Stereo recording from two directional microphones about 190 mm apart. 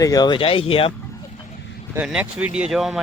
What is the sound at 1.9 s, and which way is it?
Speech, 5° right (ahead or behind).